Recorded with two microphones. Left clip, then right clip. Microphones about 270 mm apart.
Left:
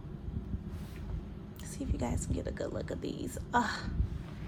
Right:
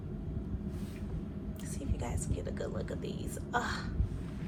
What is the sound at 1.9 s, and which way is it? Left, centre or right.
Whispering, left.